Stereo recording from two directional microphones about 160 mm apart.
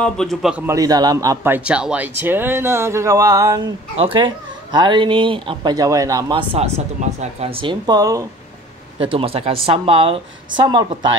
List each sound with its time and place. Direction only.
0.0 s a man's voice: 5° left (ahead or behind)
0.7 s a man's voice: 20° right (ahead or behind)
3.9 s speech: 35° right (ahead or behind)
9.0 s speech: 35° right (ahead or behind)